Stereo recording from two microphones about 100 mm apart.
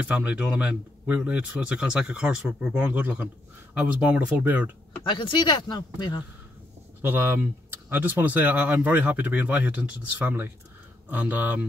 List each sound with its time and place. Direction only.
0.0 s speech: 10° right (ahead or behind)
5.0 s speech: 55° left (ahead or behind)
7.0 s speech: 20° right (ahead or behind)